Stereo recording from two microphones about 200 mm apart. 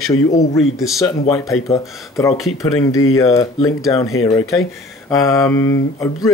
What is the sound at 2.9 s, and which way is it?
Speech, 90° left.